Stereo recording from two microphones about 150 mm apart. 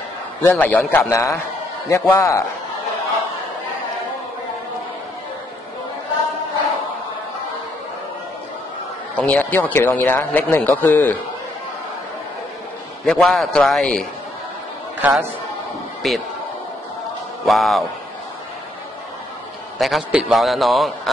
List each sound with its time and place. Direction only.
0.4 s a man's voice: 15° left (ahead or behind)
9.1 s speech: 10° left (ahead or behind)
13.0 s a man's voice: centre (ahead or behind)
15.0 s a man's voice: 10° right (ahead or behind)
16.0 s a man's voice: centre (ahead or behind)
17.5 s a man's voice: centre (ahead or behind)
19.8 s a man's voice: centre (ahead or behind)